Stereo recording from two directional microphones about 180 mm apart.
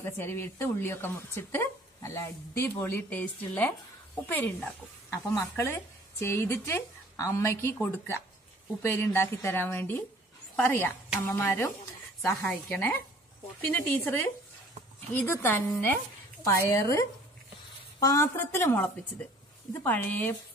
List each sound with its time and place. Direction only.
0.0 s a woman's voice: 10° left (ahead or behind)
19.8 s a woman's voice: 10° left (ahead or behind)